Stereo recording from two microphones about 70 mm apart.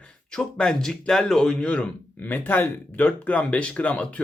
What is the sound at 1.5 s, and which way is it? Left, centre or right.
Speech, centre.